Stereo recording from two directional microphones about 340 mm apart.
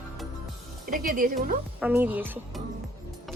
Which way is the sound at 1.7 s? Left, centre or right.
Centre.